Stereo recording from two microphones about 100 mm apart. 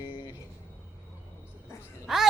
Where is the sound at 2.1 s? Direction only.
5° right (ahead or behind).